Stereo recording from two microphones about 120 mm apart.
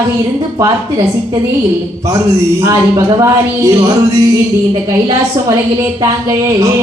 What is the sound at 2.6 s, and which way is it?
A woman's voice, 25° right (ahead or behind).